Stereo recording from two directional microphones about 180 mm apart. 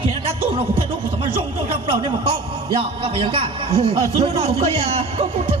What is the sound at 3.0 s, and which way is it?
A man's voice, 30° right (ahead or behind).